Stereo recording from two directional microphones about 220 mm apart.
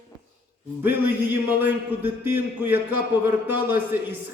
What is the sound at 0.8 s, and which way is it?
A man's voice, 10° right (ahead or behind).